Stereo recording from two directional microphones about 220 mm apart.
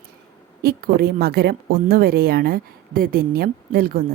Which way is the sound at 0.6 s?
45° right (ahead or behind).